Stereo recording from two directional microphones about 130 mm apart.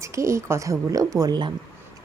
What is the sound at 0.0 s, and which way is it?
Speech, 25° right (ahead or behind).